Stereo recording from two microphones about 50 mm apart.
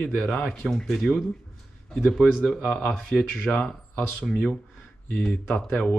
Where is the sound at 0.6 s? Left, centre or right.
Centre; by 4.0 s left.